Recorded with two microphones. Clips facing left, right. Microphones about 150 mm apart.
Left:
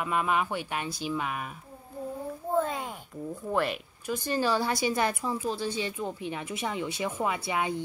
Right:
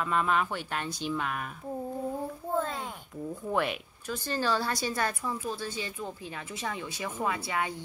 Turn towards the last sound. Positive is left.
turn(degrees=15)  # may be behind; listen again after turning